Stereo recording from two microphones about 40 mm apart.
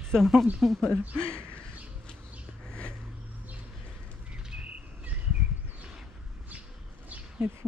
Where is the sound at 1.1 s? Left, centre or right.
Left.